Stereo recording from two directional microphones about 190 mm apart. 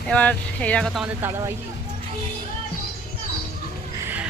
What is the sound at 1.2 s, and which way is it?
Speech, 15° right (ahead or behind).